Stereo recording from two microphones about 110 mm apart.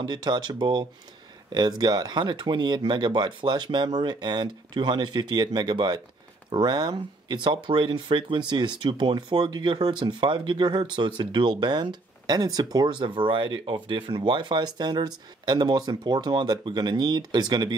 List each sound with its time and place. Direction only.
0.0 s speech: 40° right (ahead or behind)